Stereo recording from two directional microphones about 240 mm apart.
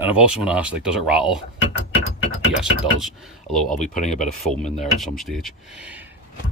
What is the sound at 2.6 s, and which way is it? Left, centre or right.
Speech, centre.